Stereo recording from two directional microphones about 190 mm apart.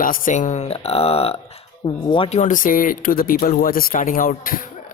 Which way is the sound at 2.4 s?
45° left (ahead or behind).